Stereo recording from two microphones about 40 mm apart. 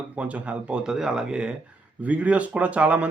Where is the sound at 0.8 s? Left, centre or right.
Centre.